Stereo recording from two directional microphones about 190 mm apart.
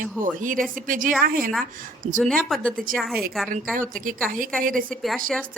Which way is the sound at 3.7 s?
45° right (ahead or behind).